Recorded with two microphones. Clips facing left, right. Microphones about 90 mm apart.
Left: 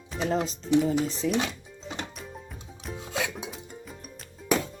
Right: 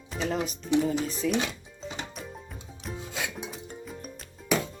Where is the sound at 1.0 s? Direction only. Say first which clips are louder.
Left 1 dB; 25° left (ahead or behind).